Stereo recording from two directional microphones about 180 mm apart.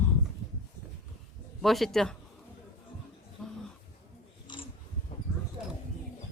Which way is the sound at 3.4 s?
Centre (ahead or behind).